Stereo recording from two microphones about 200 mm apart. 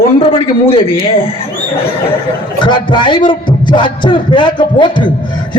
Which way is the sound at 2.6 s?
25° left (ahead or behind).